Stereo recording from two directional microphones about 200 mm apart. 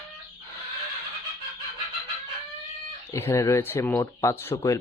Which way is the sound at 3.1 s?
15° left (ahead or behind).